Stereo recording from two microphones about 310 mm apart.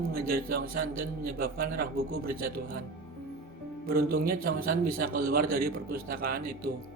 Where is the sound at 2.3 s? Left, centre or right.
Right.